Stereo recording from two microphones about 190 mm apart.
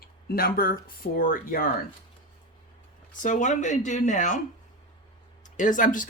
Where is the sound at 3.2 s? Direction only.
40° left (ahead or behind).